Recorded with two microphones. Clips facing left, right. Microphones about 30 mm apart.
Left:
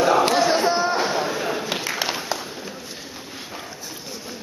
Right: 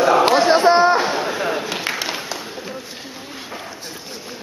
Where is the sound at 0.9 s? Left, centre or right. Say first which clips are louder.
Right 3 dB; centre.